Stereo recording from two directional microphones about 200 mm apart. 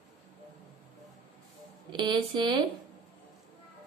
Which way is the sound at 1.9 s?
25° right (ahead or behind).